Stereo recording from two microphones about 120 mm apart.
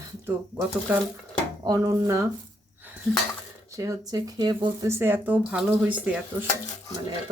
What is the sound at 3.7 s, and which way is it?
Speech, 25° right (ahead or behind).